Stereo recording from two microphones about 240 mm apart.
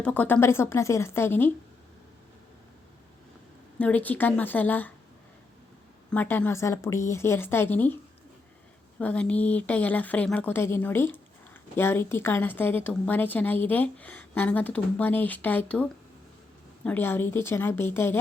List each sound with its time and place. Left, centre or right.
0.0 s a woman's voice: centre
3.8 s a woman's voice: centre
6.1 s a woman's voice: centre
9.0 s a woman's voice: centre